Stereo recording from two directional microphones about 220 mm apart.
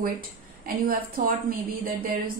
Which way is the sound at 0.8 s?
40° right (ahead or behind).